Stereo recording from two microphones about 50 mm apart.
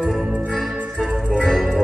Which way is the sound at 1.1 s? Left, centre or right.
Centre.